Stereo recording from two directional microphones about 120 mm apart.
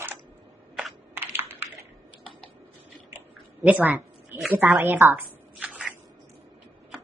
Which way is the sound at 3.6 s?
15° right (ahead or behind).